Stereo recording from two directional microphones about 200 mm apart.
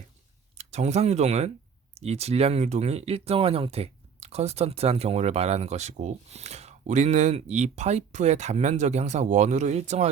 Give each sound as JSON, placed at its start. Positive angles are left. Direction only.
{"t": 0.5, "sound": "speech", "side_deg": -35}